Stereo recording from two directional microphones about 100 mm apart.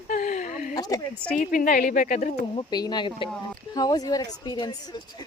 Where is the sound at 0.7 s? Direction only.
40° left (ahead or behind).